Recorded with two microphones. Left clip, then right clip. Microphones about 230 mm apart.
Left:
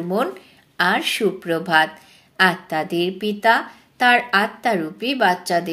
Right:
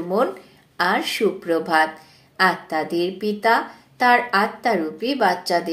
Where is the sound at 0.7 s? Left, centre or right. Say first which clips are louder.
Left 1 dB; left.